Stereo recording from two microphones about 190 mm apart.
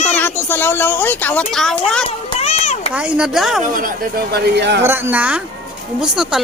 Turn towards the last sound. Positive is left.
turn(degrees=-5)  # may be behind; listen again after turning